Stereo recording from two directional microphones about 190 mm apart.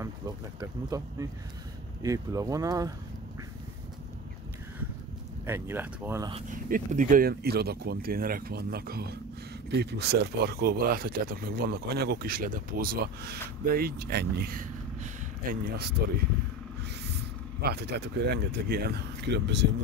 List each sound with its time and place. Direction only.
0.6 s speech: 20° right (ahead or behind)
5.4 s speech: 10° right (ahead or behind)
6.7 s speech: 40° right (ahead or behind)
17.6 s speech: 55° right (ahead or behind)